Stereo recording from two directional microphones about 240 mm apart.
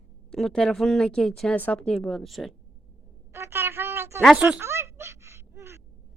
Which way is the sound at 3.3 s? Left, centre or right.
Centre.